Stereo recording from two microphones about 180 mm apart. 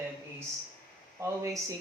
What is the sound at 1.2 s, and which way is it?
Speech, 20° right (ahead or behind).